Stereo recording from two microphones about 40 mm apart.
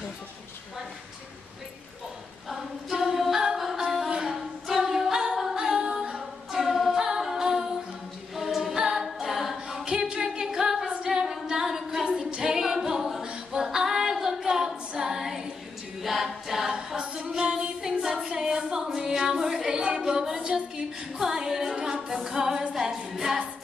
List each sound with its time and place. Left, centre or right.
2.5 s a capella: centre
3.5 s music: centre
4.3 s a capella: centre
6.5 s a capella: centre
9.7 s a capella: centre
13.6 s female singing: centre
15.0 s a capella: centre
16.7 s female singing: centre
17.4 s music: right
17.8 s female singing: centre
18.3 s a sound: centre
21.2 s music: centre
22.1 s a capella: centre
22.8 s music: centre